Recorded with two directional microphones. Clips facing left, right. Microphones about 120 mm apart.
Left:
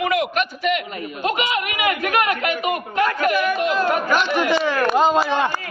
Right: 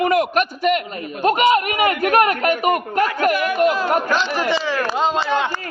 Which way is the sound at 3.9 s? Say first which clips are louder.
Even; 30° right (ahead or behind).